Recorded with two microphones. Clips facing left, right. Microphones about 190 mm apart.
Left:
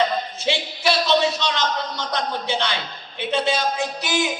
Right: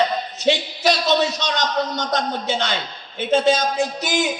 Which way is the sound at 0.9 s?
45° right (ahead or behind).